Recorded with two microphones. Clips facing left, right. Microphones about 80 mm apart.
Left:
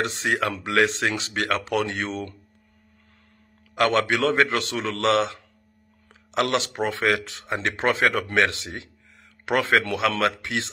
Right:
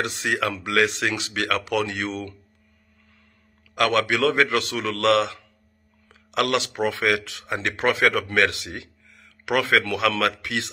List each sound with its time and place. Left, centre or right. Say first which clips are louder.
0.0 s speech: even; left
3.7 s a man's voice: even; left